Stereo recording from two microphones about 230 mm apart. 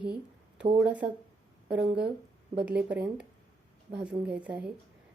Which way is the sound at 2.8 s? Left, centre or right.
Centre.